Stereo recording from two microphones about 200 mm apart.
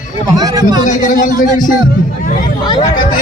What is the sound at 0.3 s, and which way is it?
Speech, 20° right (ahead or behind).